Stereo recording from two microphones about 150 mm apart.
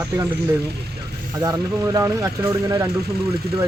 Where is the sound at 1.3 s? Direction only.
25° right (ahead or behind).